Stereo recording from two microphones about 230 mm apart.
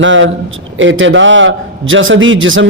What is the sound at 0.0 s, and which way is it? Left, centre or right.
A man's voice, right.